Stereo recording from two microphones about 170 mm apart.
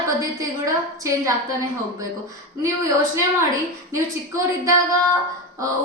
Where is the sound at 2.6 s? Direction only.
20° right (ahead or behind).